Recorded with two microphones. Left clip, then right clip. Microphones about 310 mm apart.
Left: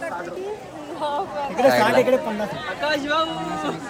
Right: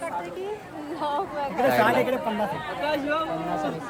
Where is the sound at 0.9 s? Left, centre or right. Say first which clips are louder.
Left 2 dB; right.